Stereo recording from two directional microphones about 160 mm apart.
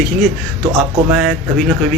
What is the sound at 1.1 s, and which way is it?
Speech, 5° right (ahead or behind).